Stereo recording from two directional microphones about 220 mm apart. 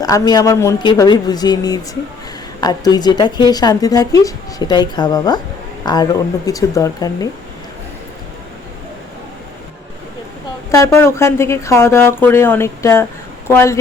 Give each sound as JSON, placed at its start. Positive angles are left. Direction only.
{"t": 0.0, "sound": "speech", "side_deg": 15}
{"t": 10.7, "sound": "speech", "side_deg": 10}